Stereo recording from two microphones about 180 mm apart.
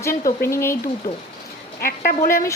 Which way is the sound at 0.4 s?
15° left (ahead or behind).